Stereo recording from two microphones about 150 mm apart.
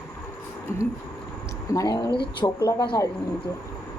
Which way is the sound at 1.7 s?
25° left (ahead or behind).